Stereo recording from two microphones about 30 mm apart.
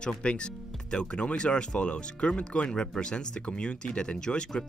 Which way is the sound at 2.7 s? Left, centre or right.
Left.